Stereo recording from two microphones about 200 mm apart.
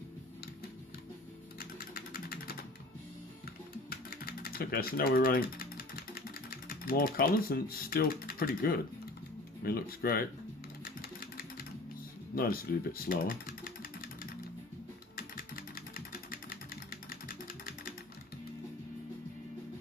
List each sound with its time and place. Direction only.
1.5 s typing: 50° left (ahead or behind)
3.8 s typing: 50° left (ahead or behind)
9.6 s speech: 50° left (ahead or behind)
12.4 s speech: 45° left (ahead or behind)
15.1 s vehicle: 45° left (ahead or behind)